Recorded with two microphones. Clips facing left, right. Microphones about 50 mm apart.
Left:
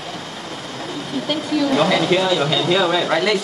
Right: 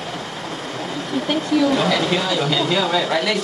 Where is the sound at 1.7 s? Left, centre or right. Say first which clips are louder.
Left 2 dB; centre.